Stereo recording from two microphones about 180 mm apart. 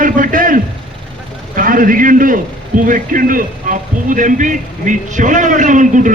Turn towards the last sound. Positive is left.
turn(degrees=-45)  # may be behind; listen again after turning